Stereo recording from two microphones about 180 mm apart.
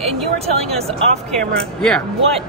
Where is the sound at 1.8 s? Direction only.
5° left (ahead or behind).